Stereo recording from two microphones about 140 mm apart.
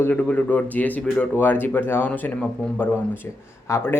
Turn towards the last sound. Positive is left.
turn(degrees=20)  # may be behind; listen again after turning